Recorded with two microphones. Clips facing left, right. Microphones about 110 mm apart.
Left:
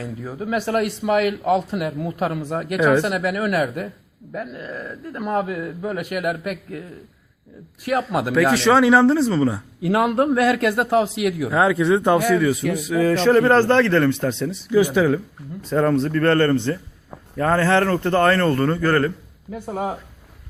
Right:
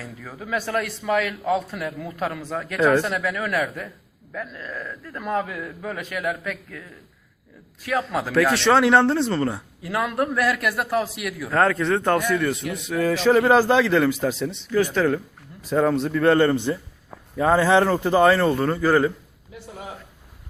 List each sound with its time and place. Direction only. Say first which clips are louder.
0.2 s speech: left 3 dB; 20° left (ahead or behind)
7.9 s speech: left 3 dB; 15° left (ahead or behind)
8.3 s a man's voice: left 2 dB; centre (ahead or behind)
9.9 s speech: left 6 dB; 30° left (ahead or behind)
11.5 s a man's voice: left 1 dB; 10° left (ahead or behind)
14.7 s a man's voice: left 4 dB; 10° left (ahead or behind); by 19.1 s 5° right (ahead or behind)
19.5 s speech: left 11 dB; 50° left (ahead or behind)